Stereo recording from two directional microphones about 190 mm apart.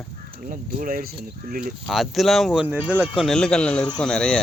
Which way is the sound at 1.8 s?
Centre (ahead or behind).